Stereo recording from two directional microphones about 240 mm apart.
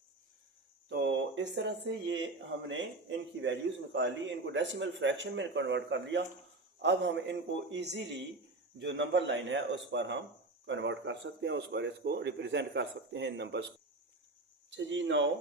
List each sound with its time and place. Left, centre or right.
0.9 s a man's voice: right
14.7 s speech: right